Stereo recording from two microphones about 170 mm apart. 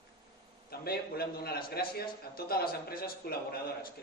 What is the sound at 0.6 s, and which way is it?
A man's voice, 65° left (ahead or behind).